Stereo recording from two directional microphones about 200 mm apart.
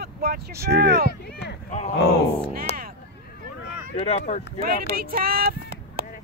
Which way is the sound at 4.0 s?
30° left (ahead or behind).